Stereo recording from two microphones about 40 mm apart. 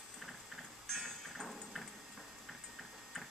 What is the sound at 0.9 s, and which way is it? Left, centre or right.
Music, centre.